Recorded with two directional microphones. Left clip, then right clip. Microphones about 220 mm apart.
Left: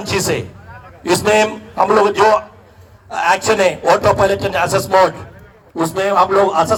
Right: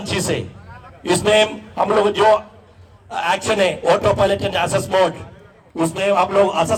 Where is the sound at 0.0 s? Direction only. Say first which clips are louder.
Left 4 dB; 15° left (ahead or behind).